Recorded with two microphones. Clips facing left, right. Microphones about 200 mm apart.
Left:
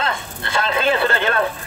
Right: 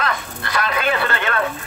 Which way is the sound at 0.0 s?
25° left (ahead or behind).